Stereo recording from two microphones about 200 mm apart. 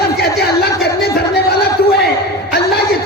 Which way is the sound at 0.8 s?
55° left (ahead or behind).